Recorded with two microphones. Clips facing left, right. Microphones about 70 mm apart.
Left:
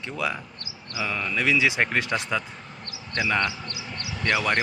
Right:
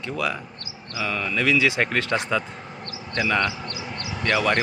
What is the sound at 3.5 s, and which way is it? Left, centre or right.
Speech, right.